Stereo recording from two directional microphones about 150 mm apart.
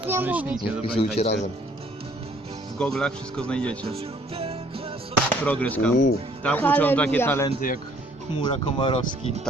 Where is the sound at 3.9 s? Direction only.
40° right (ahead or behind).